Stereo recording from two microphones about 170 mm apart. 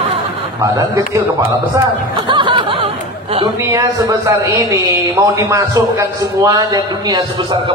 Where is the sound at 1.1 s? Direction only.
15° right (ahead or behind); by 3.5 s 35° right (ahead or behind).